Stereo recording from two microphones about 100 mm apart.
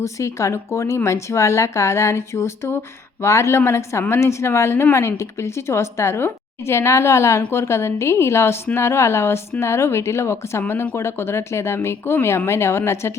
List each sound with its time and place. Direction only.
0.0 s speech: 30° left (ahead or behind)